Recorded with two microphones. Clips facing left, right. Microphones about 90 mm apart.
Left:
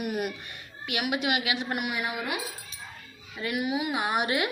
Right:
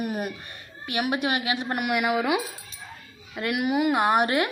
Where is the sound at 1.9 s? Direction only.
80° right.